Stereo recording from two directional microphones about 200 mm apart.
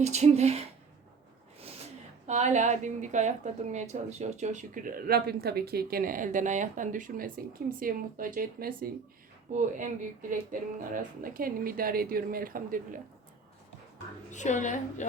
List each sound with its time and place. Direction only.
0.0 s a woman's voice: 35° right (ahead or behind)
2.2 s a woman's voice: 35° right (ahead or behind)
14.3 s a woman's voice: 35° left (ahead or behind)